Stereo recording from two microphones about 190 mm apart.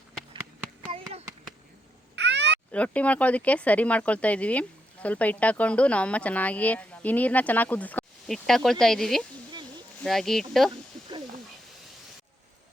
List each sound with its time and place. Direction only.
2.1 s cat: 65° right (ahead or behind)
2.7 s speech: 5° left (ahead or behind)